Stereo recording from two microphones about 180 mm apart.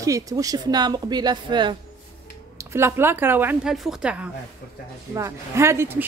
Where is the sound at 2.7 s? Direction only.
15° right (ahead or behind).